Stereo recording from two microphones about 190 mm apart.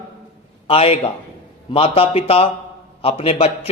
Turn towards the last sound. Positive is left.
turn(degrees=30)  # may be behind; listen again after turning